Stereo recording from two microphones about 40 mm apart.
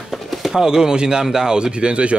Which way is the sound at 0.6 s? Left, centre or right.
Centre.